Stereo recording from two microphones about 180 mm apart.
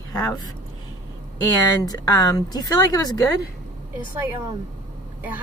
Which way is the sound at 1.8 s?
20° left (ahead or behind).